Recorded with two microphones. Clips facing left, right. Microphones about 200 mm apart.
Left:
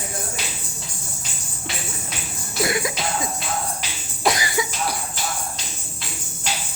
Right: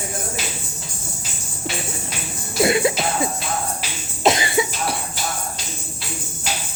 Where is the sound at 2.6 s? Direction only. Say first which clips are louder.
Right 6 dB; 25° right (ahead or behind).